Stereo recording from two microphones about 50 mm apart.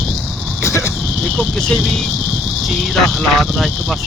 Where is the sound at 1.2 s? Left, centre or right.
Centre.